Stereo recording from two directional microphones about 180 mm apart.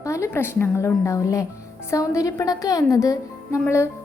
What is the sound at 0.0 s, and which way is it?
A woman's voice, 15° left (ahead or behind).